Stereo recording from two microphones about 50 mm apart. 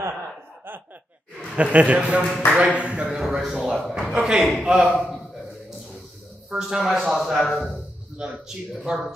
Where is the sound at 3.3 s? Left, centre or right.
Centre.